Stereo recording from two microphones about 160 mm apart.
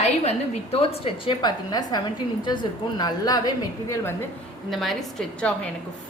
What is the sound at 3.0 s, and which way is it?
A woman's voice, 25° left (ahead or behind).